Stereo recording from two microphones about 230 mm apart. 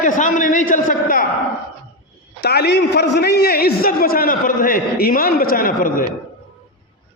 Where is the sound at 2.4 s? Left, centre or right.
Left.